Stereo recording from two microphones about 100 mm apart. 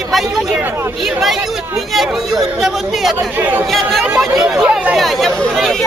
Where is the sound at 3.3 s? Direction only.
15° right (ahead or behind).